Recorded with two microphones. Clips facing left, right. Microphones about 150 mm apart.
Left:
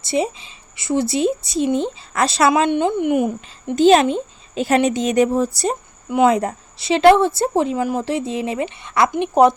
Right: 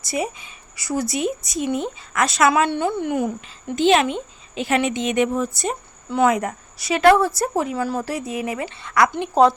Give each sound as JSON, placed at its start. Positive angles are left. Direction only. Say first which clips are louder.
{"t": 0.0, "sound": "a woman's voice", "louder": "left 5 dB", "side_deg": 25}
{"t": 2.5, "sound": "a woman's voice", "louder": "left 3 dB", "side_deg": 20}
{"t": 3.8, "sound": "a woman's voice", "louder": "left 5 dB", "side_deg": 40}